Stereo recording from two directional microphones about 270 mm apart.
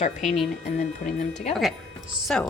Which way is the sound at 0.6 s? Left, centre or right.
Left.